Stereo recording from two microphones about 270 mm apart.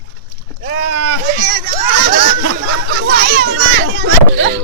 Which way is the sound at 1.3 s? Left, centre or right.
Right.